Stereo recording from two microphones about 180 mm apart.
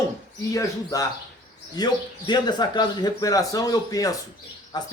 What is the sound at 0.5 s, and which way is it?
Speech, 20° left (ahead or behind).